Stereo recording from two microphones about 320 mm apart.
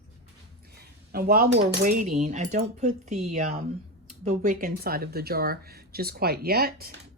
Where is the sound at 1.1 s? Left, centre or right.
Right.